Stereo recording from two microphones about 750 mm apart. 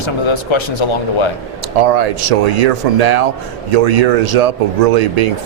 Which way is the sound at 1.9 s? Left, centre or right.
Right.